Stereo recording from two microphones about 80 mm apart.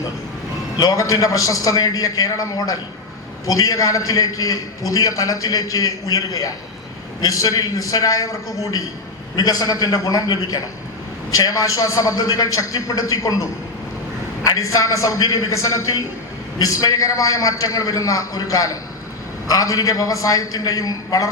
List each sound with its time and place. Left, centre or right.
0.8 s a man's voice: left